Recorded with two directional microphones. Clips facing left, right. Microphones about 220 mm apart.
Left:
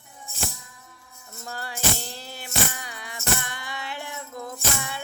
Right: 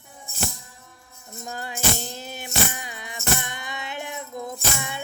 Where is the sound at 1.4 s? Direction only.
20° right (ahead or behind).